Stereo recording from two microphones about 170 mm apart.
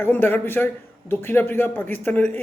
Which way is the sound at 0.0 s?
10° left (ahead or behind).